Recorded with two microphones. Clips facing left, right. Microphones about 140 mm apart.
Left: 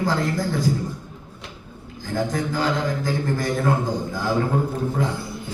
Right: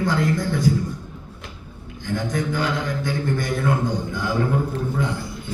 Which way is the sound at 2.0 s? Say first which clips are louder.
Even; 35° left (ahead or behind).